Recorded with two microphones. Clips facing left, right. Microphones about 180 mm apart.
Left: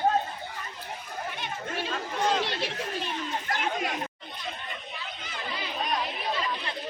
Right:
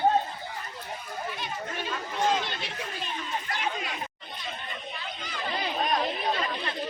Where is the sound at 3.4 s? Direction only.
50° left (ahead or behind).